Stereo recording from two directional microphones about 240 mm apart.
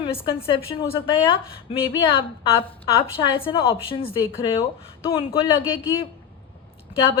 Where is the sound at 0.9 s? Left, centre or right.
Left.